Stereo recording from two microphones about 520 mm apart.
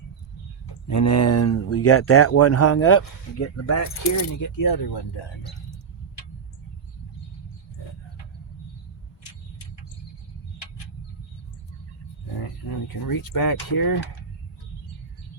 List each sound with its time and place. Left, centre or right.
0.9 s speech: left
12.4 s speech: left